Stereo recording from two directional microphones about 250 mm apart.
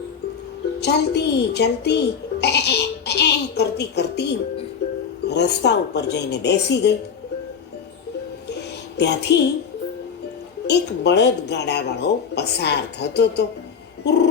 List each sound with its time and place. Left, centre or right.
0.8 s a woman's voice: left
9.0 s a woman's voice: left
10.7 s speech: left
14.0 s a sound: left